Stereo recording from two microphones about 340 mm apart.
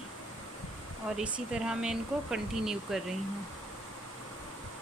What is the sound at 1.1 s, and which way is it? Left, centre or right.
Speech, centre.